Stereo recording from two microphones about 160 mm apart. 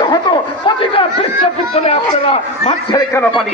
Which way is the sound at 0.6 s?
35° left (ahead or behind).